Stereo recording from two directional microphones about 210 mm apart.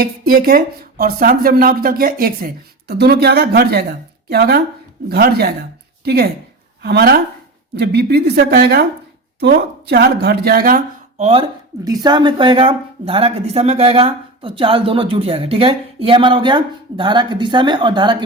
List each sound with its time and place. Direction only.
0.0 s speech: 45° right (ahead or behind)
11.2 s speech: 25° right (ahead or behind)
11.7 s speech: 15° right (ahead or behind)